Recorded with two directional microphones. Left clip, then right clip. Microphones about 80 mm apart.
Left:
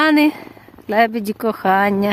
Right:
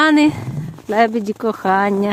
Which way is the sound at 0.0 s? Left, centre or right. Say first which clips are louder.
Right 1 dB; centre.